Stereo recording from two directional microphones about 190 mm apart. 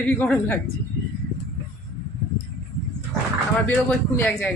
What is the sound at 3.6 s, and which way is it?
Speech, 10° left (ahead or behind).